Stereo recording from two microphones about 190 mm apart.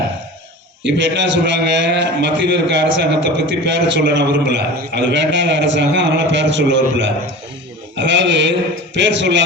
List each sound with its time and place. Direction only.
0.9 s a man's voice: 70° right (ahead or behind)